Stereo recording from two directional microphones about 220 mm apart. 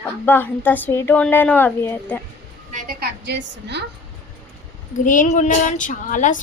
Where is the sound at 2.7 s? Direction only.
45° right (ahead or behind).